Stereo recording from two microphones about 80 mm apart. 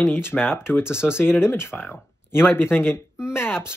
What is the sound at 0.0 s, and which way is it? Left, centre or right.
Speech, left.